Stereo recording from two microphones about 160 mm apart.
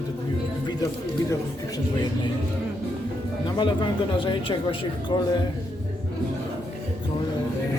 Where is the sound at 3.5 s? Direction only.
30° left (ahead or behind).